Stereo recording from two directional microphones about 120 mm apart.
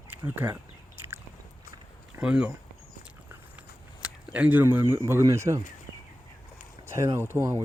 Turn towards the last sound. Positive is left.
turn(degrees=-25)  # may be behind; listen again after turning